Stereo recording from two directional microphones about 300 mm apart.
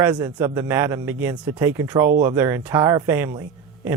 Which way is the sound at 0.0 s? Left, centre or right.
Centre.